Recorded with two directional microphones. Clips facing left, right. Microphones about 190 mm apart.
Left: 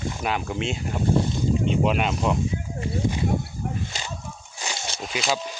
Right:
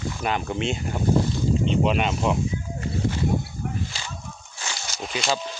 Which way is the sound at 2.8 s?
15° left (ahead or behind).